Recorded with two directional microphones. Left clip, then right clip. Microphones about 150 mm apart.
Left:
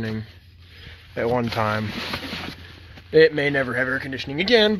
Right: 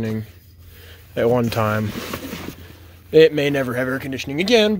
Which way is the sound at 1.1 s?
25° right (ahead or behind).